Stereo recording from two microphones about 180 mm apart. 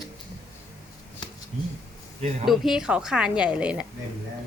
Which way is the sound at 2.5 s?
Centre (ahead or behind).